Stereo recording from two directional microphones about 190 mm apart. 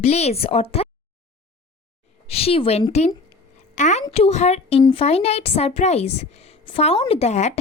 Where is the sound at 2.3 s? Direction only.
30° left (ahead or behind).